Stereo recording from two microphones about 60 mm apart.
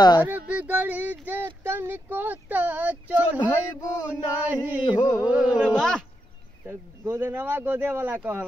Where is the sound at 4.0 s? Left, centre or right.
Right.